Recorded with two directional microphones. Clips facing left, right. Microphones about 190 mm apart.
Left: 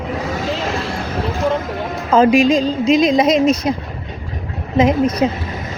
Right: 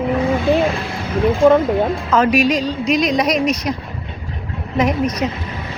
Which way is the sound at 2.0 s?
30° left (ahead or behind).